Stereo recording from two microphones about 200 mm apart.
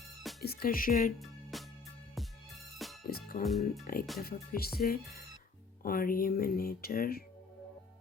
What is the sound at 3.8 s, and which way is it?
Speech, 45° left (ahead or behind).